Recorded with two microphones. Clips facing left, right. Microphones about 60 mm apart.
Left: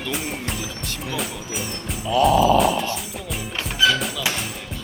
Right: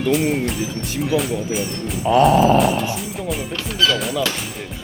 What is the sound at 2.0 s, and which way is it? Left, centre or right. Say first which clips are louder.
Music: right 4 dB; right.